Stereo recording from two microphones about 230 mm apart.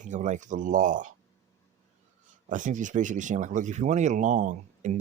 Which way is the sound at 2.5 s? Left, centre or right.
Right.